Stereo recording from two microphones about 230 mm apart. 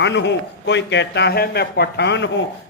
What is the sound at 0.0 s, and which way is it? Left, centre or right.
A man's voice, left.